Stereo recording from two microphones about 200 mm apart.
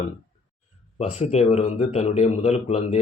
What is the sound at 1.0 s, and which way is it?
A man's voice, 35° left (ahead or behind).